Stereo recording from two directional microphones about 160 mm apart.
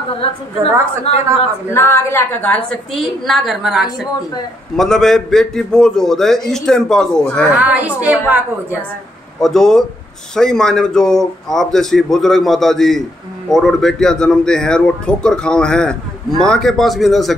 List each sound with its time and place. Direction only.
1.1 s a man's voice: 40° left (ahead or behind)
1.7 s a woman's voice: 15° left (ahead or behind)
7.5 s a woman's voice: 10° right (ahead or behind)
9.4 s a man's voice: 5° left (ahead or behind)